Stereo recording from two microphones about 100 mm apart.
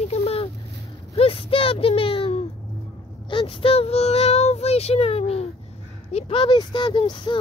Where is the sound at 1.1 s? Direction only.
70° left (ahead or behind).